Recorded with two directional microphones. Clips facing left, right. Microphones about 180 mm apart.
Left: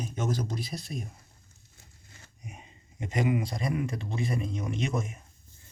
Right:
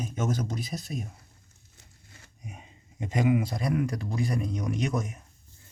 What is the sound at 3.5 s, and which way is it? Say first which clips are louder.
Speech: right 3 dB; centre (ahead or behind).